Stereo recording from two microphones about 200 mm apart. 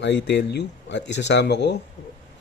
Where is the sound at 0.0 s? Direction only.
60° left (ahead or behind).